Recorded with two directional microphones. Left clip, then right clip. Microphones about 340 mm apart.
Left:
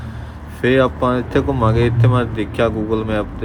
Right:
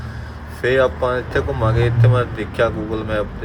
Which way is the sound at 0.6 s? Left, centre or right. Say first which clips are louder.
Left 1 dB; left.